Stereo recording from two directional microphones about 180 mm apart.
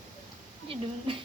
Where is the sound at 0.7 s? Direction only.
30° right (ahead or behind).